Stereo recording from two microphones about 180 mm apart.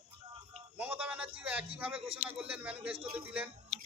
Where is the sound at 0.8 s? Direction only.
10° right (ahead or behind).